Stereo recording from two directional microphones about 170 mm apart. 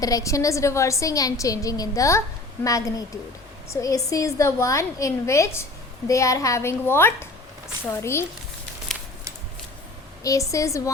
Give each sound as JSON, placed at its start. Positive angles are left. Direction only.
{"t": 0.0, "sound": "a woman's voice", "side_deg": 20}
{"t": 10.2, "sound": "a woman's voice", "side_deg": 20}